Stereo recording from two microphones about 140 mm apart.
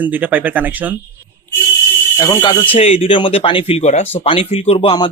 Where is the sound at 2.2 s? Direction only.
30° left (ahead or behind).